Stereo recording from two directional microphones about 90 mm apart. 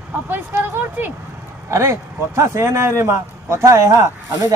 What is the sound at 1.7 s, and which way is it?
Speech, 30° right (ahead or behind).